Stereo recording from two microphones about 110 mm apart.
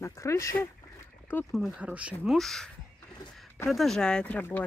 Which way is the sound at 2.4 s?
5° left (ahead or behind).